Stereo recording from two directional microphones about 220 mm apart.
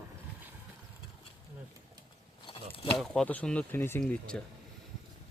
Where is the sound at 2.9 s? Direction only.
Centre (ahead or behind).